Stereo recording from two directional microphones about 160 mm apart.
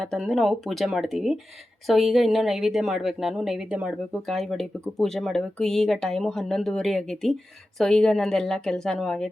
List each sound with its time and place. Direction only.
0.0 s speech: centre (ahead or behind)